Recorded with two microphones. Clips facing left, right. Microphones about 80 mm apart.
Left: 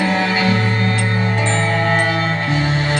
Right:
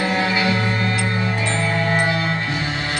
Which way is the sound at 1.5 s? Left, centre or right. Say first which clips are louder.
Left 3 dB; left.